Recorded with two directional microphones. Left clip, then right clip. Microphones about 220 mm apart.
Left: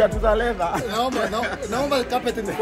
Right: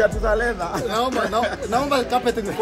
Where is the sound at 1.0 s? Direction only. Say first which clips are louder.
Right 3 dB; centre (ahead or behind).